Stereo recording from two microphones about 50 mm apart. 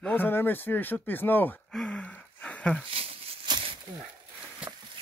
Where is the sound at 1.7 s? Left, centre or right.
Centre.